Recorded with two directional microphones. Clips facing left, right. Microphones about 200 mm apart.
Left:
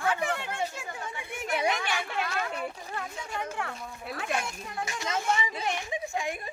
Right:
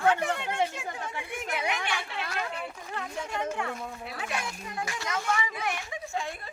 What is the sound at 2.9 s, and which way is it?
Speech, centre (ahead or behind).